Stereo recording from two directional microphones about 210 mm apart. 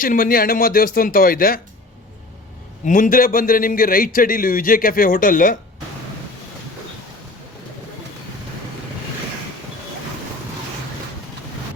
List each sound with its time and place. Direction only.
0.0 s a man's voice: 40° left (ahead or behind)
2.8 s a man's voice: 40° left (ahead or behind)